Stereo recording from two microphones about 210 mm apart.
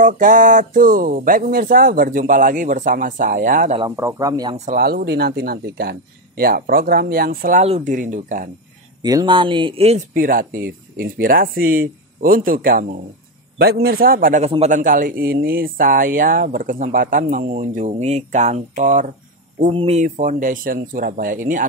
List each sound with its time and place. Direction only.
0.0 s speech: 40° right (ahead or behind)
3.8 s speech: 15° right (ahead or behind)
4.6 s speech: 40° right (ahead or behind)
9.0 s speech: 20° right (ahead or behind); by 21.6 s 40° right (ahead or behind)